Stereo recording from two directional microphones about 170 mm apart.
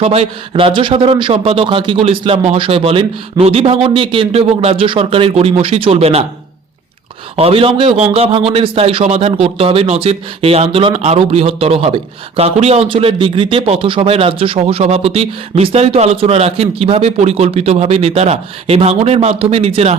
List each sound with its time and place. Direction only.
0.0 s speech: 35° right (ahead or behind)
7.3 s speech: 35° right (ahead or behind)